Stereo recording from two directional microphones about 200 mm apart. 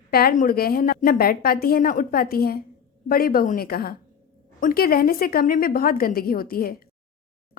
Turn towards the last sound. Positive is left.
turn(degrees=45)  # may be behind; listen again after turning